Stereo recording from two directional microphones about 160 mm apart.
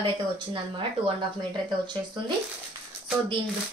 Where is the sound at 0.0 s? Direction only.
30° right (ahead or behind).